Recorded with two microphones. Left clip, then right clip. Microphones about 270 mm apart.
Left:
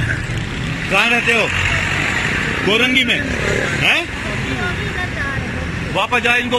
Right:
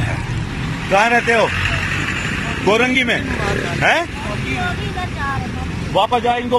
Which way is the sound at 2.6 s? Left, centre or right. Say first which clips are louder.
Even; centre.